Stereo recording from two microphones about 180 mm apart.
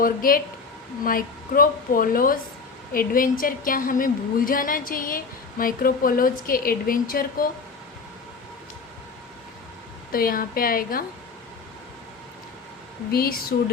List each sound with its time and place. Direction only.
0.0 s a woman's voice: 50° left (ahead or behind)
10.1 s a woman's voice: 55° left (ahead or behind)
13.1 s speech: 55° left (ahead or behind)